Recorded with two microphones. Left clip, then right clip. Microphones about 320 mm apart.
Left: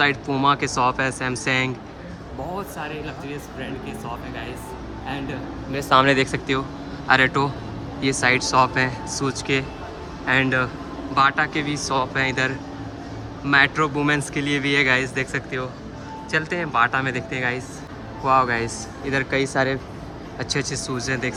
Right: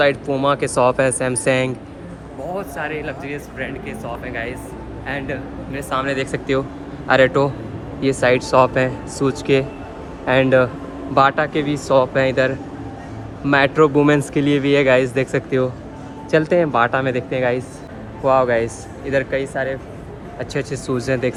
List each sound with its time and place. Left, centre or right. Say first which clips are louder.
0.0 s speech: right 3 dB; centre
5.7 s speech: left 5 dB; left
6.1 s speech: right 2 dB; centre